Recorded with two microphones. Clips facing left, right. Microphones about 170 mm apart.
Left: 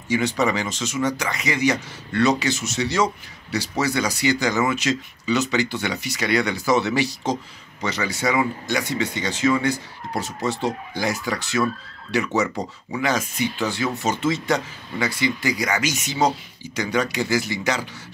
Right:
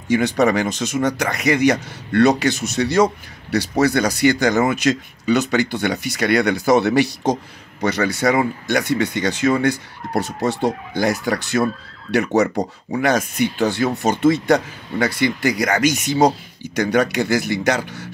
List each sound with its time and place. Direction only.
0.1 s speech: 55° right (ahead or behind)
12.4 s speech: 40° right (ahead or behind)
13.0 s speech: 55° right (ahead or behind)